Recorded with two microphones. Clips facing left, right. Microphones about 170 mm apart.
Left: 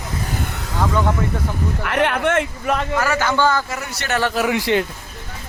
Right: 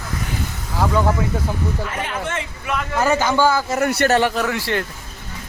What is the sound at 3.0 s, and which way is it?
Speech, 20° right (ahead or behind).